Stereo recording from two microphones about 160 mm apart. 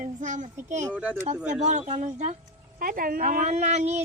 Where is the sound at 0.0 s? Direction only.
50° right (ahead or behind).